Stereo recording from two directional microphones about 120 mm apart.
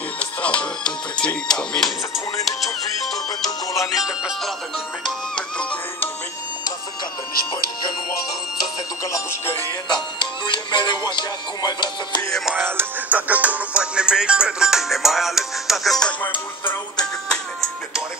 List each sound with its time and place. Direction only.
0.2 s music: 10° left (ahead or behind)
3.7 s music: centre (ahead or behind)
5.0 s music: 10° left (ahead or behind)
10.1 s music: 40° left (ahead or behind)
12.3 s music: centre (ahead or behind)
12.5 s music: 15° right (ahead or behind); by 16.7 s 15° left (ahead or behind)
17.3 s music: centre (ahead or behind)